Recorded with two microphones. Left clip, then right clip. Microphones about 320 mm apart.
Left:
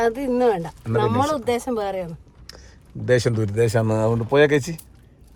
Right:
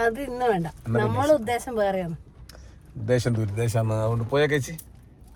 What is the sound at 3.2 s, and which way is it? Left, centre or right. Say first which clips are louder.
Speech: left 8 dB; left.